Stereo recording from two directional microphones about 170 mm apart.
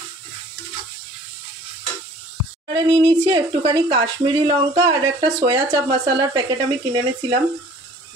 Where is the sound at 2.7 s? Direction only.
35° right (ahead or behind).